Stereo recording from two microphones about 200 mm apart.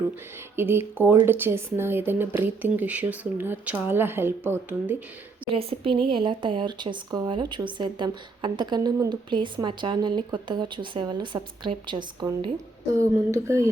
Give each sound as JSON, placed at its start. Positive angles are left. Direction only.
{"t": 0.5, "sound": "speech", "side_deg": -10}
{"t": 5.5, "sound": "speech", "side_deg": -25}